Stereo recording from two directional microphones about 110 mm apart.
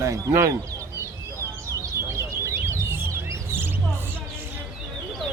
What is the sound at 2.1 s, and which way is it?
Bird, 25° right (ahead or behind).